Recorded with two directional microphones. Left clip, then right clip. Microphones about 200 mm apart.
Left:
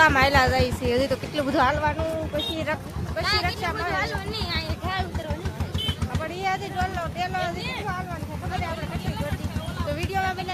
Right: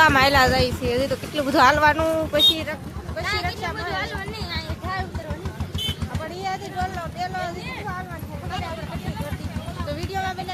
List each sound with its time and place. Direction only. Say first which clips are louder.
0.0 s speech: right 2 dB; 15° right (ahead or behind); by 1.5 s 5° left (ahead or behind)
1.5 s speech: right 7 dB; 20° right (ahead or behind)
3.2 s speech: left 1 dB; centre (ahead or behind)
6.4 s speech: left 1 dB; 5° right (ahead or behind)
9.9 s speech: left 1 dB; 10° right (ahead or behind)